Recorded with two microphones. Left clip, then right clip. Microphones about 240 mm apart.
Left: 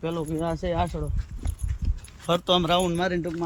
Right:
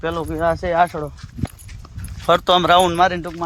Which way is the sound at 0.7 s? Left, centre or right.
Right.